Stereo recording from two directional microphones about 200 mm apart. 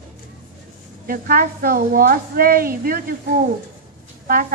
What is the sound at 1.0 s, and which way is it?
A woman's voice, 45° right (ahead or behind).